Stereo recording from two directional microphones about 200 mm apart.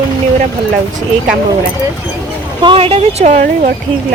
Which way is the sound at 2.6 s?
25° right (ahead or behind).